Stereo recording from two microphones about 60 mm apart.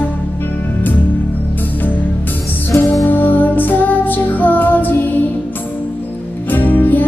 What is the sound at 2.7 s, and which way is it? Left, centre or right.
Music, left.